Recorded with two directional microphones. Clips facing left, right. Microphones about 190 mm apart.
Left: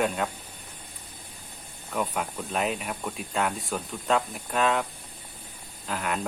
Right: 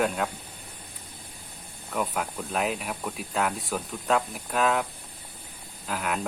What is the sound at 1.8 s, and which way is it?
Speech, centre (ahead or behind).